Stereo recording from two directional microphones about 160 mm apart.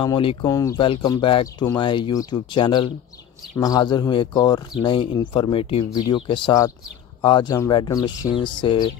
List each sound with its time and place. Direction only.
0.0 s speech: 35° left (ahead or behind)
0.5 s speech: 20° left (ahead or behind)